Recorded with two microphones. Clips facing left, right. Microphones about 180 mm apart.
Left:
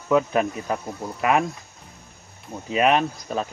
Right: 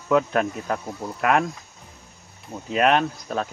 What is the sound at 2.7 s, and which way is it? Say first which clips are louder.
Speech: even; 5° left (ahead or behind).